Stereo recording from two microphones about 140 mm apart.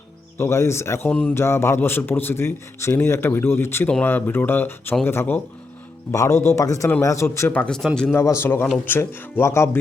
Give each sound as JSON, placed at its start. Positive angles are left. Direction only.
{"t": 0.3, "sound": "a man's voice", "side_deg": 20}
{"t": 8.1, "sound": "a man's voice", "side_deg": 20}